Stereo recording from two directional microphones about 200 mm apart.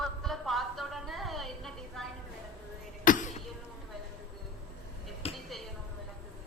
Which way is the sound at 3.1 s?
40° left (ahead or behind).